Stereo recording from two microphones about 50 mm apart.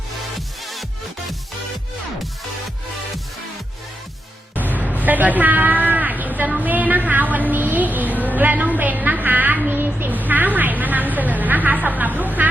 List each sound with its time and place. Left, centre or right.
0.3 s music: centre
4.9 s a woman's voice: right
8.4 s a sound: right